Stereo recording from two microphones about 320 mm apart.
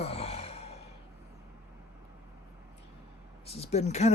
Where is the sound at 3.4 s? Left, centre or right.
Centre.